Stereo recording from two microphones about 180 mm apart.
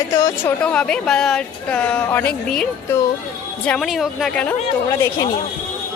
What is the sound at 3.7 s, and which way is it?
Speech, centre (ahead or behind).